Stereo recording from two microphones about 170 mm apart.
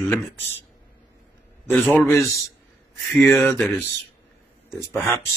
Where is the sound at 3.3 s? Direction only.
15° left (ahead or behind).